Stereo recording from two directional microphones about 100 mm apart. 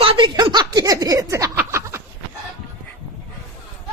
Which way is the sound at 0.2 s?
50° right (ahead or behind).